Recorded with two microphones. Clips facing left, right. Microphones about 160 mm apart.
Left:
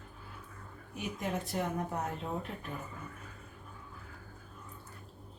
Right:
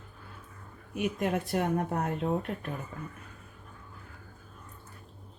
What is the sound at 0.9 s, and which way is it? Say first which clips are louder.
Speech: right 7 dB; 65° right (ahead or behind).